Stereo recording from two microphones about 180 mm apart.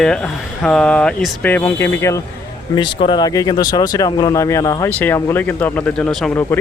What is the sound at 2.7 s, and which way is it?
Speech, 25° left (ahead or behind).